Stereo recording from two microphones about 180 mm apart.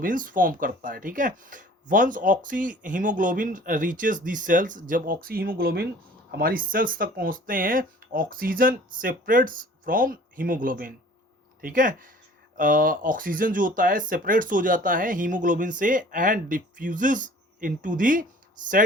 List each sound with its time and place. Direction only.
0.0 s speech: 50° right (ahead or behind)